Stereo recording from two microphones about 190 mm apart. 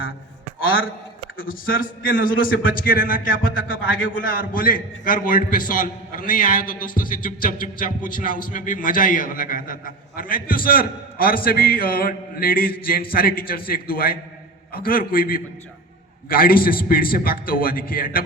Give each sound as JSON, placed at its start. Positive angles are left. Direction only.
{"t": 1.4, "sound": "a man's voice", "side_deg": 50}
{"t": 3.7, "sound": "a man's voice", "side_deg": 90}
{"t": 4.2, "sound": "a man's voice", "side_deg": 50}